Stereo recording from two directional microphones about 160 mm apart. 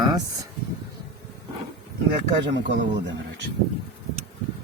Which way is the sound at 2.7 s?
90° right.